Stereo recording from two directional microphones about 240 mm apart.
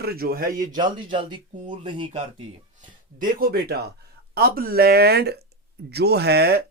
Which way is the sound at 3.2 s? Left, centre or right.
Right.